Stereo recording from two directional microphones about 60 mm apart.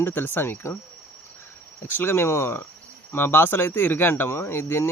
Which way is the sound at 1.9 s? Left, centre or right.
Left.